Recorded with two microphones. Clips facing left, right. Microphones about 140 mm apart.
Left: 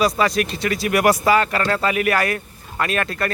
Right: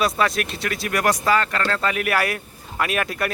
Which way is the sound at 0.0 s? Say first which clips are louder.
Left 3 dB; centre (ahead or behind).